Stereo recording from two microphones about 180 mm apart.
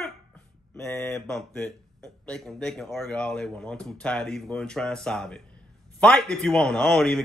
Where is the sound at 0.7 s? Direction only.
15° left (ahead or behind).